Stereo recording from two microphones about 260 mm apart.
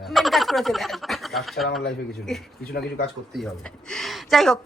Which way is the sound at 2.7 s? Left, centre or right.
Left.